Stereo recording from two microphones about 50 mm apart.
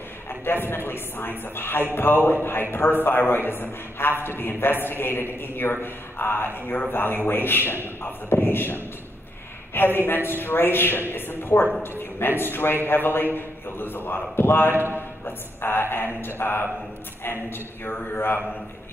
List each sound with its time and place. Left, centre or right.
0.5 s a woman's voice: left
14.7 s a man's voice: right
15.0 s a woman's voice: left